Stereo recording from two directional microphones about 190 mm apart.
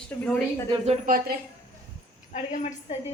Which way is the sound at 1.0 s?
45° right (ahead or behind).